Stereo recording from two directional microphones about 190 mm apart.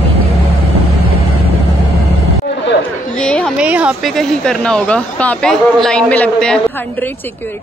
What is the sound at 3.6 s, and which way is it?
Speech, 5° right (ahead or behind).